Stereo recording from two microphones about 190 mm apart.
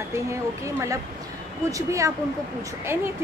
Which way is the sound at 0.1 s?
15° right (ahead or behind).